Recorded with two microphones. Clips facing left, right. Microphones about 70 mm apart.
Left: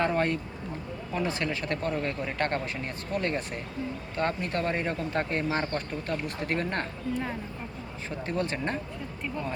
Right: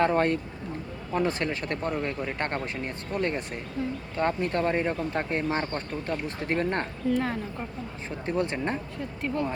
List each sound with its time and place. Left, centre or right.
0.0 s speech: right
7.1 s speech: right
8.3 s speech: right